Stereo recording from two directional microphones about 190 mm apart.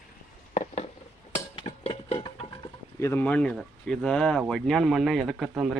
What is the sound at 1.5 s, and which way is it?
Music, 30° left (ahead or behind).